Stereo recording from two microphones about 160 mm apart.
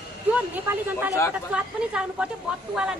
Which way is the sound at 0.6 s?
10° right (ahead or behind).